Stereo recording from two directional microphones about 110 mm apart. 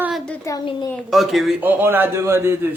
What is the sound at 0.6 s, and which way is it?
Speech, 50° left (ahead or behind).